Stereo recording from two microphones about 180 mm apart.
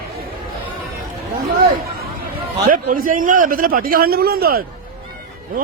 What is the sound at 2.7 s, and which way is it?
A man's voice, 50° right (ahead or behind).